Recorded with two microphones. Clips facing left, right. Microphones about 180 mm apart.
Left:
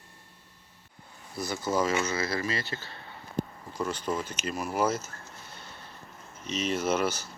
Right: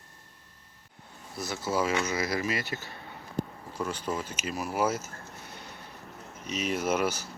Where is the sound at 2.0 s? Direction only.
15° right (ahead or behind).